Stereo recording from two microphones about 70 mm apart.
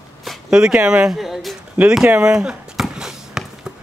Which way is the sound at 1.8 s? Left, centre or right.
Centre.